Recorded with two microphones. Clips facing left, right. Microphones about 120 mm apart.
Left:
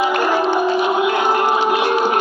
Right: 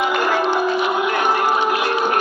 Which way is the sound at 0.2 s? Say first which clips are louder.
Left 2 dB; 20° left (ahead or behind).